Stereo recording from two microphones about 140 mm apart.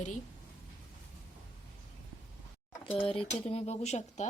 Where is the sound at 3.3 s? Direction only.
50° left (ahead or behind).